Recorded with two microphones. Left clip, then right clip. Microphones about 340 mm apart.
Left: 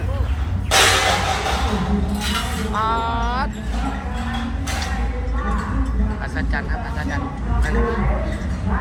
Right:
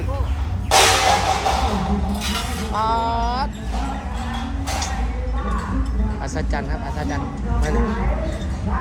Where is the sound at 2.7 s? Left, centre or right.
Centre.